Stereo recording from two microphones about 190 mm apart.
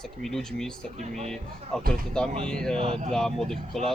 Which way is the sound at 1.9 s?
5° left (ahead or behind).